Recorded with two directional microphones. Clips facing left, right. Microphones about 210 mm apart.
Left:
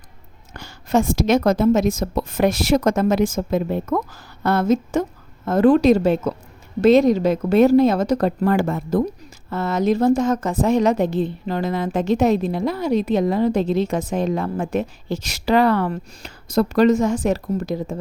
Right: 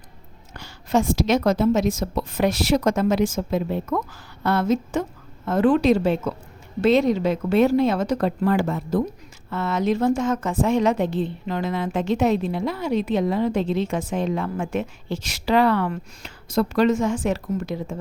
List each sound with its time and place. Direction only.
0.5 s a woman's voice: 50° left (ahead or behind)